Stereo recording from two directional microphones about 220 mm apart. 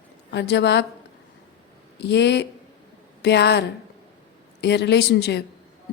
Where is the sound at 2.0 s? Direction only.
50° left (ahead or behind).